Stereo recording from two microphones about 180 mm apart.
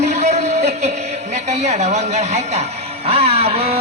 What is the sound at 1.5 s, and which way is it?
Speech, 40° right (ahead or behind).